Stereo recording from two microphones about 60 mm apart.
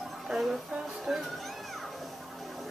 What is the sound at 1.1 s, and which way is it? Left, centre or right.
Speech, centre.